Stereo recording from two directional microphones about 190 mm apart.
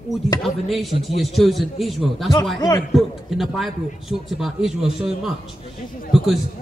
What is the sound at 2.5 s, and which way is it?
Speech, 20° left (ahead or behind).